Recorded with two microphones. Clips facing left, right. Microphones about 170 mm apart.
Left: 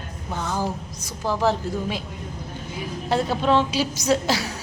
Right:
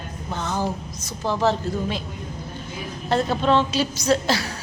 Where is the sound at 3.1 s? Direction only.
10° left (ahead or behind).